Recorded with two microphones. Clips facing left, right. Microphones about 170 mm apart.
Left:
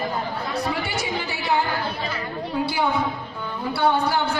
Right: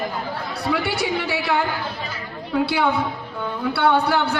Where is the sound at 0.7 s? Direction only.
65° right (ahead or behind).